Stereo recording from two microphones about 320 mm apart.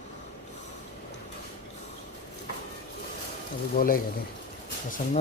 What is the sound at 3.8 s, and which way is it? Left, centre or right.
Speech, left.